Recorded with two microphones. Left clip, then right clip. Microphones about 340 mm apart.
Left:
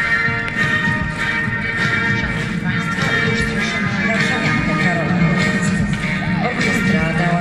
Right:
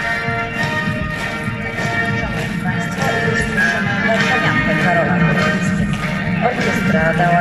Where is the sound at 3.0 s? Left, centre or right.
Centre.